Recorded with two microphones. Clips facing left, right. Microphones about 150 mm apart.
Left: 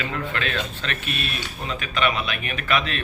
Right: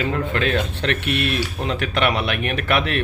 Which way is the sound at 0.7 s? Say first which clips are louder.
Right 8 dB; 65° right (ahead or behind).